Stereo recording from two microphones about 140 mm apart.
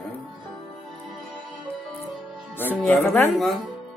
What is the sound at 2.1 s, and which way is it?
Music, centre (ahead or behind).